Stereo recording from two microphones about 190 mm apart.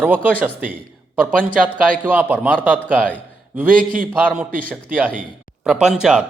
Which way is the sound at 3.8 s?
45° right (ahead or behind).